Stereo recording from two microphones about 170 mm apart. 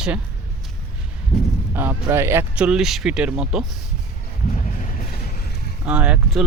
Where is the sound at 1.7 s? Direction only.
15° right (ahead or behind).